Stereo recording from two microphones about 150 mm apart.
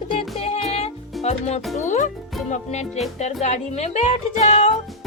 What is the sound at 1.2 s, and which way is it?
Speech, 45° left (ahead or behind).